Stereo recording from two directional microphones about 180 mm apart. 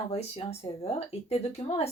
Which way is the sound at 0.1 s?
35° left (ahead or behind).